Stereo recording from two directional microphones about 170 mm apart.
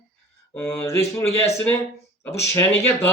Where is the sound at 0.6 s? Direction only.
15° left (ahead or behind).